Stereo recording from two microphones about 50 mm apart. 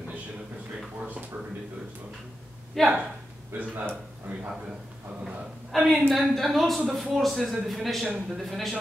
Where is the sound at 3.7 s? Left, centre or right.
Right.